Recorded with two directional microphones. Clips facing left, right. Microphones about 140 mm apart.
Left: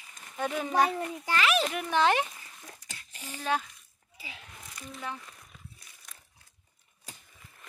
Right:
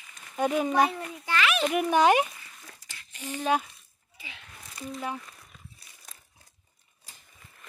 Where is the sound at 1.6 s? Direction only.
10° right (ahead or behind).